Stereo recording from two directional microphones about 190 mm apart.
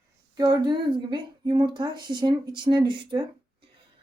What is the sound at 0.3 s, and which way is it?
A woman's voice, 20° right (ahead or behind).